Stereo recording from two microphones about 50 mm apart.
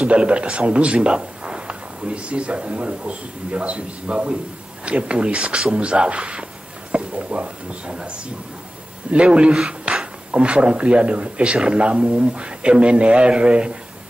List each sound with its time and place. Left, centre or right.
0.0 s a man's voice: right
9.9 s a sound: right
10.3 s a man's voice: right